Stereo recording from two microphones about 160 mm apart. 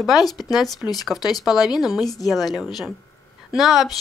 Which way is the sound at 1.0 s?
Centre (ahead or behind).